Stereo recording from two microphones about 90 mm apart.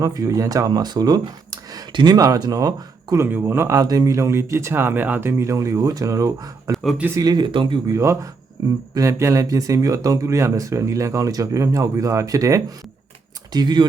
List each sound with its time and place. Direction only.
0.0 s speech: 40° right (ahead or behind)
1.9 s speech: 60° right (ahead or behind)
2.1 s speech: 40° right (ahead or behind)
3.2 s a man's voice: 25° right (ahead or behind)
3.8 s speech: 40° right (ahead or behind); by 5.3 s 20° right (ahead or behind)
5.4 s speech: 35° right (ahead or behind)
7.3 s speech: 70° right (ahead or behind)
7.9 s speech: 35° right (ahead or behind)
13.5 s speech: 50° right (ahead or behind)